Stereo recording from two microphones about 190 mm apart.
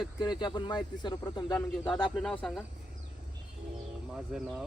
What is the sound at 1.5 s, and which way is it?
Speech, 5° left (ahead or behind).